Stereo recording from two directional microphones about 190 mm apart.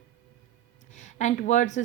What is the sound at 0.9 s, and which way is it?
Speech, 40° left (ahead or behind).